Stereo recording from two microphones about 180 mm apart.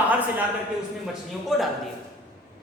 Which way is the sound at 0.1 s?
10° right (ahead or behind).